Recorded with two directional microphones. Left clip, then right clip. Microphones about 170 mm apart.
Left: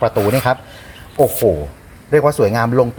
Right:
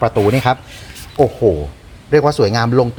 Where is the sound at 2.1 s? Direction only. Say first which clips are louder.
Even; 5° right (ahead or behind).